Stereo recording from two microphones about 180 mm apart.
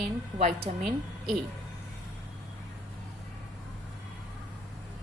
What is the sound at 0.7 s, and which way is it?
Speech, 40° right (ahead or behind).